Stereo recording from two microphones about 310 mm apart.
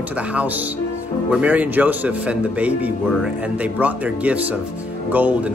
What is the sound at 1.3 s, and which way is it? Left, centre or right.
Speech, centre.